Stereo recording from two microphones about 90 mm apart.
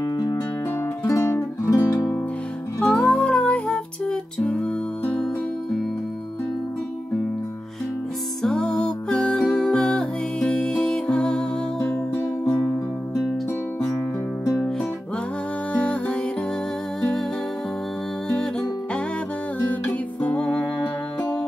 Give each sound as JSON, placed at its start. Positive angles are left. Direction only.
{"t": 0.0, "sound": "music", "side_deg": 45}
{"t": 1.0, "sound": "music", "side_deg": 30}
{"t": 2.8, "sound": "music", "side_deg": 10}
{"t": 8.4, "sound": "music", "side_deg": 5}
{"t": 15.7, "sound": "music", "side_deg": 15}
{"t": 18.3, "sound": "music", "side_deg": 10}